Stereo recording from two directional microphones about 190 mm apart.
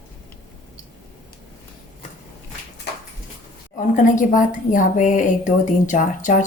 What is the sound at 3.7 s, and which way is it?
A woman's voice, 45° left (ahead or behind).